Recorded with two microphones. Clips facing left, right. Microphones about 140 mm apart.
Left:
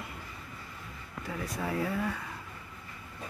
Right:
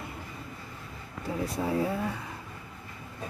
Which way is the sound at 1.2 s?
30° right (ahead or behind).